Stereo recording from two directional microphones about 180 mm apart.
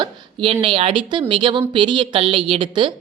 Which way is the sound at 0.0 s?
30° right (ahead or behind).